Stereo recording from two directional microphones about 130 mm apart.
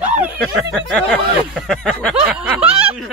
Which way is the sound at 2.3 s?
10° right (ahead or behind).